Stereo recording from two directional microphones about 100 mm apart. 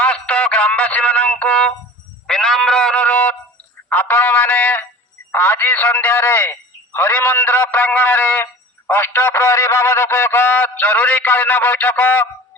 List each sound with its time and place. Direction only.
0.0 s music: 15° left (ahead or behind)
2.2 s sheep: 5° left (ahead or behind)
3.8 s a sound: 20° left (ahead or behind)